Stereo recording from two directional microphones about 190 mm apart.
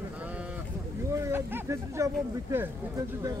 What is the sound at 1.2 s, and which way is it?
Speech, 15° right (ahead or behind).